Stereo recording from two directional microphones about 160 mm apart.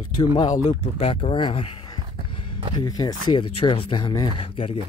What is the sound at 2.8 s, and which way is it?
Speech, 25° left (ahead or behind).